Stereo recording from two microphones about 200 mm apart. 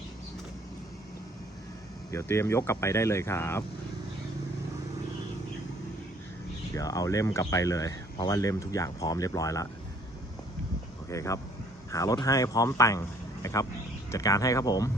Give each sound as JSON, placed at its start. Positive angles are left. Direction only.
{"t": 2.0, "sound": "speech", "side_deg": 15}
{"t": 6.7, "sound": "speech", "side_deg": 15}
{"t": 11.1, "sound": "speech", "side_deg": 15}